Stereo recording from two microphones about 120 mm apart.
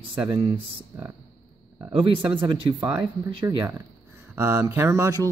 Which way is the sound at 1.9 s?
45° right (ahead or behind).